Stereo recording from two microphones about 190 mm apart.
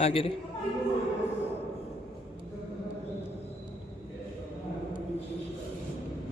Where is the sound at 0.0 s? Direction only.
30° left (ahead or behind).